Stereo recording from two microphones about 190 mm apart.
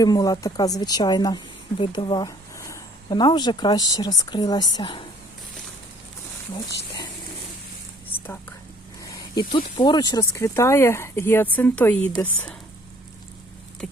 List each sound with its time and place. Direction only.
0.0 s speech: 20° left (ahead or behind)
9.0 s speech: 20° left (ahead or behind)
13.8 s vehicle: centre (ahead or behind)